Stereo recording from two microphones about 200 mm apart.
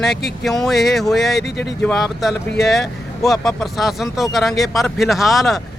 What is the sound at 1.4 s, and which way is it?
Speech, 55° left (ahead or behind).